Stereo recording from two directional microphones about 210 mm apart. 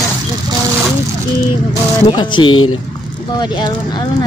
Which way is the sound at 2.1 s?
25° left (ahead or behind).